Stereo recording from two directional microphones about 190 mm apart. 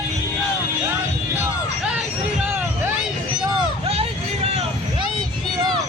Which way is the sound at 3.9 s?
35° right (ahead or behind).